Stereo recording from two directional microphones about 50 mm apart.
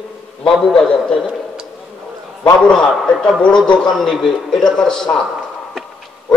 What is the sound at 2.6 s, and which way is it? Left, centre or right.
Speech, centre.